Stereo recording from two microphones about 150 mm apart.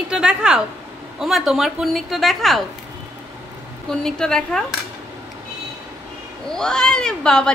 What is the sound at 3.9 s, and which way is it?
Speech, 5° left (ahead or behind).